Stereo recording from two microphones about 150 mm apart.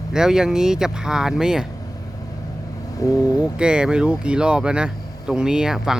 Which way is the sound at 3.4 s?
5° right (ahead or behind).